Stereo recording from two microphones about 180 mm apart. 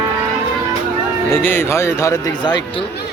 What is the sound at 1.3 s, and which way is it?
Speech, 10° left (ahead or behind).